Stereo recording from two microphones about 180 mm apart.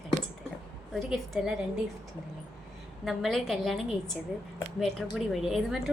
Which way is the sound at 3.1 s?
Centre (ahead or behind).